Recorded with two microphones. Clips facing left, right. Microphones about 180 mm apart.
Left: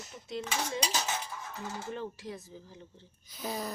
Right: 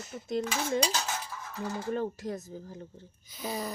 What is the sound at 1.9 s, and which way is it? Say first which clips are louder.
Speech: right 7 dB; 45° right (ahead or behind).